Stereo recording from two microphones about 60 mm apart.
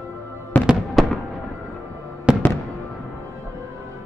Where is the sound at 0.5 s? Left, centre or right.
Left.